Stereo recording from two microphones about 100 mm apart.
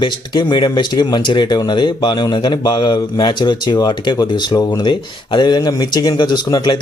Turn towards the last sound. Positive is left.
turn(degrees=45)  # may be behind; listen again after turning